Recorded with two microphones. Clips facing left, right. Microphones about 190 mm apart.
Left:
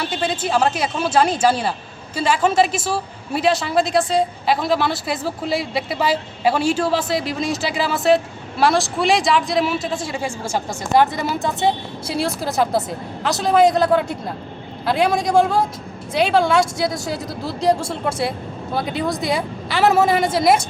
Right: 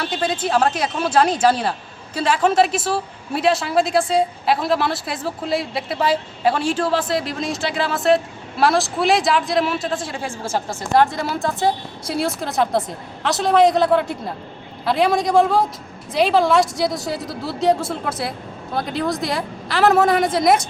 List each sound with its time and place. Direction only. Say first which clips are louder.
0.0 s a woman's voice: even; 5° left (ahead or behind)